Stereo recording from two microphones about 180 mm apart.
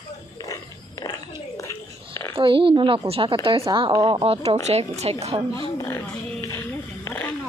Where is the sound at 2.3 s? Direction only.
30° right (ahead or behind).